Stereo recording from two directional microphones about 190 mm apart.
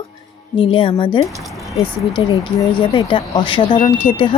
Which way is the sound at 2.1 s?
25° left (ahead or behind).